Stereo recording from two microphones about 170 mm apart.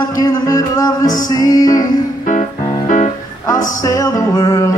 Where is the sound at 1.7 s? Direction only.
50° left (ahead or behind).